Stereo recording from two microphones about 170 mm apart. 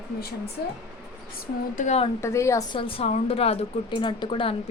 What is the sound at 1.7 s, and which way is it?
Speech, 40° left (ahead or behind).